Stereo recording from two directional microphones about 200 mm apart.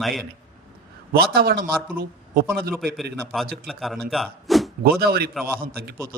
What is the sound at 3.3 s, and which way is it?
A man's voice, centre (ahead or behind).